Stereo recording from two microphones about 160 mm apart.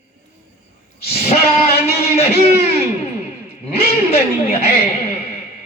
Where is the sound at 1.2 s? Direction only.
40° left (ahead or behind).